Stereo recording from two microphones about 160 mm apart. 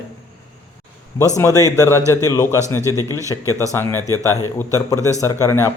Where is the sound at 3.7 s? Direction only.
20° left (ahead or behind).